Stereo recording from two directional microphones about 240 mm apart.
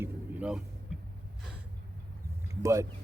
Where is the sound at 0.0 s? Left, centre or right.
Centre.